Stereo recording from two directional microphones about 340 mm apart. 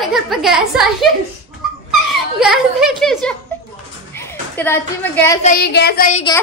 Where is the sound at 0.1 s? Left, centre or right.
Centre.